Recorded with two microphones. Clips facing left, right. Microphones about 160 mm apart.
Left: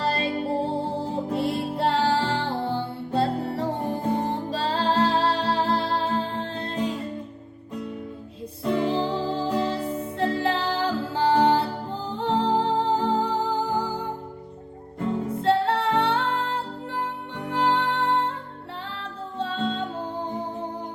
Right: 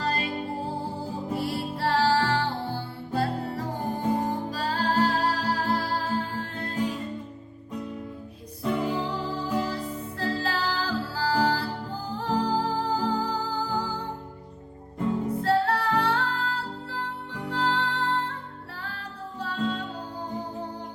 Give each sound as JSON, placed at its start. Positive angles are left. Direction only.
{"t": 0.0, "sound": "music", "side_deg": 30}
{"t": 8.8, "sound": "music", "side_deg": 30}
{"t": 15.4, "sound": "music", "side_deg": 25}